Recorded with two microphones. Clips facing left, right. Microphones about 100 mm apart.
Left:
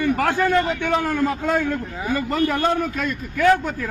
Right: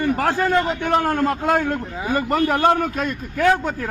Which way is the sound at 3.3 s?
35° right (ahead or behind).